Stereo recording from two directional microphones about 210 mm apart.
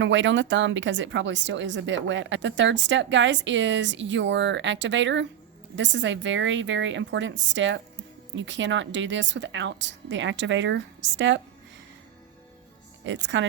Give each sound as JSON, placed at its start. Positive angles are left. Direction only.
{"t": 0.0, "sound": "a woman's voice", "side_deg": -60}
{"t": 13.1, "sound": "a woman's voice", "side_deg": -60}